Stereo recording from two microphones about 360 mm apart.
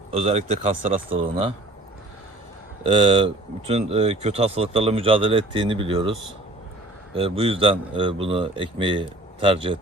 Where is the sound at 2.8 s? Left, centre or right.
Centre.